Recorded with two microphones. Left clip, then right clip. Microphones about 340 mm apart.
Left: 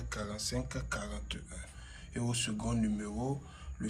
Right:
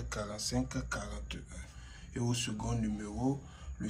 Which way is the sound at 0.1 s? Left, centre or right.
Centre.